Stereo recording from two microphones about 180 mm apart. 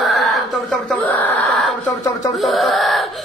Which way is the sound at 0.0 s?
Centre (ahead or behind).